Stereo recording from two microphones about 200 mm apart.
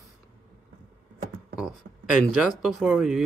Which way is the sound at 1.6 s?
Centre (ahead or behind).